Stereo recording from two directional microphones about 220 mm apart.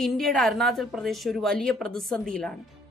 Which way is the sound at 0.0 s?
Centre (ahead or behind).